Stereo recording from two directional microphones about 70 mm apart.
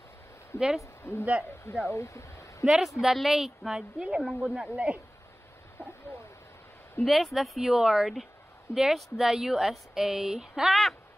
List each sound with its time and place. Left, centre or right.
0.6 s speech: centre
1.1 s a man's voice: left
2.6 s speech: centre
4.7 s speech: centre
7.1 s speech: centre